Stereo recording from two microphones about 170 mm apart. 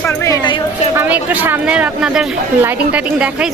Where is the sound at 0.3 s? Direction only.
25° left (ahead or behind).